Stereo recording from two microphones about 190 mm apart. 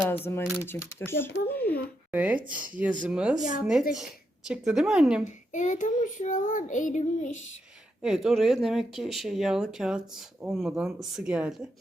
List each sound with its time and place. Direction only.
0.1 s a child's voice: 10° left (ahead or behind)
2.1 s speech: 5° right (ahead or behind)
5.2 s speech: 40° left (ahead or behind)
8.0 s speech: centre (ahead or behind)